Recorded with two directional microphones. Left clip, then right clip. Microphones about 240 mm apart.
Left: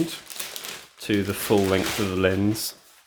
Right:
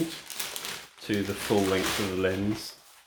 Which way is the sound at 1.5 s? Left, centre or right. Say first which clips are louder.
Left 5 dB; left.